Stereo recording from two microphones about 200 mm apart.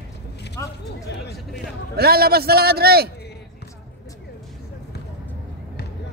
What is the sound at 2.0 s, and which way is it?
A man's voice, 50° right (ahead or behind).